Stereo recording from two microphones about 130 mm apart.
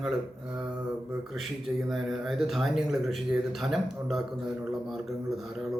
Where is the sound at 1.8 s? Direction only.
5° right (ahead or behind).